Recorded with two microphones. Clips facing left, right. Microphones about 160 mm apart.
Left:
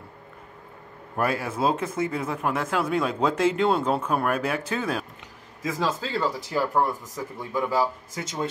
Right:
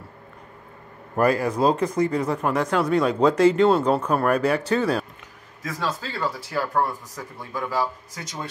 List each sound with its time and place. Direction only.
1.1 s speech: 5° left (ahead or behind)
5.6 s speech: 20° left (ahead or behind)
6.8 s speech: 5° left (ahead or behind)
7.5 s speech: 15° left (ahead or behind)